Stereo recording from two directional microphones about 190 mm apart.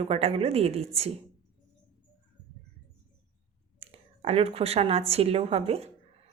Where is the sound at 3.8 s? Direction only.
30° right (ahead or behind).